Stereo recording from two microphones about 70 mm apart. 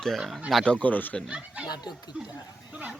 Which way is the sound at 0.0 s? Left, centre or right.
Centre.